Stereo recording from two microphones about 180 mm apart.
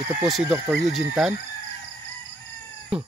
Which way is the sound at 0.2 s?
5° right (ahead or behind).